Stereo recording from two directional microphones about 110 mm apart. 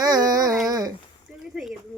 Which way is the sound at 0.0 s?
35° right (ahead or behind).